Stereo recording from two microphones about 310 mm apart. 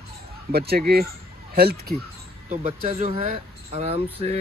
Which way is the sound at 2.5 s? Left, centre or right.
Centre.